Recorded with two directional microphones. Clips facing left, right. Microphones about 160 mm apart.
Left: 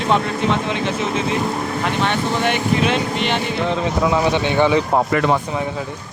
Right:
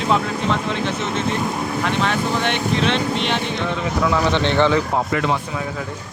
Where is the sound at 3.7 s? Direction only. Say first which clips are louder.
Left 2 dB; 20° left (ahead or behind).